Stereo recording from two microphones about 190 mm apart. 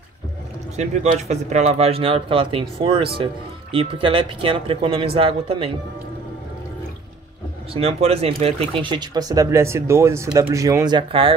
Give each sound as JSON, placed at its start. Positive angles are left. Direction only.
{"t": 0.7, "sound": "a man's voice", "side_deg": -35}
{"t": 7.7, "sound": "speech", "side_deg": -30}